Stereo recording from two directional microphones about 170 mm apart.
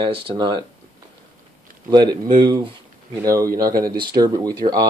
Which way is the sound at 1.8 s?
25° right (ahead or behind).